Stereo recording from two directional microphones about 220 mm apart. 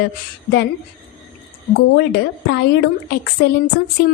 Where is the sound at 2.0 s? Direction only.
50° left (ahead or behind).